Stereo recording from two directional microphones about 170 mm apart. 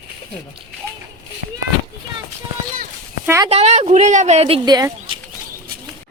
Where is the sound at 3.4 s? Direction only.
40° right (ahead or behind); by 5.1 s 25° right (ahead or behind).